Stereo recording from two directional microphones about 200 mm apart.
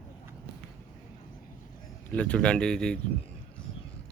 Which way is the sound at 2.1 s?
5° left (ahead or behind).